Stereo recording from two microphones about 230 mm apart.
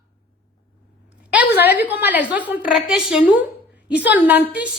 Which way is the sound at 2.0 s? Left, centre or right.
Centre.